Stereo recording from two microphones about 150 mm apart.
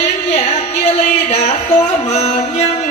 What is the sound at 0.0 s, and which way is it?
Music, 45° left (ahead or behind).